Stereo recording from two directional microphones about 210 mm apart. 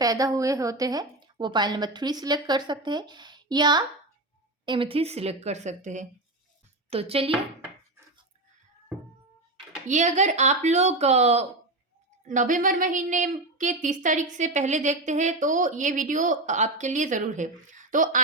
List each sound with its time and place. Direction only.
0.0 s a woman's voice: 15° right (ahead or behind)
9.8 s a woman's voice: 35° right (ahead or behind)